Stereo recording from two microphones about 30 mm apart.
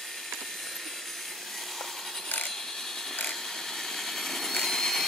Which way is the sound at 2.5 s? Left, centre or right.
Centre.